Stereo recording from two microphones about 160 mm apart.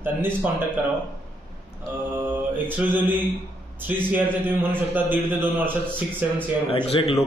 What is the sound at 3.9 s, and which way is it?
A man's voice, 10° right (ahead or behind).